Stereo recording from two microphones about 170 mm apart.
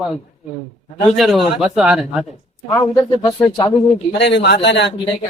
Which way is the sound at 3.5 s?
30° left (ahead or behind).